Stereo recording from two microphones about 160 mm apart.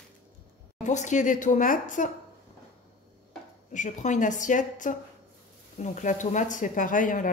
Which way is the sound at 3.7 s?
50° left (ahead or behind).